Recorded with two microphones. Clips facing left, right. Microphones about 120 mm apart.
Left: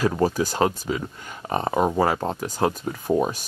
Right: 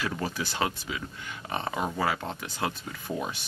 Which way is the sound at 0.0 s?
40° left (ahead or behind).